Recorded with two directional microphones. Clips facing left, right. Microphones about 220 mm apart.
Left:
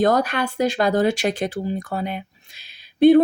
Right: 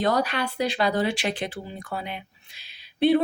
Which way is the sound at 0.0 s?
45° left (ahead or behind).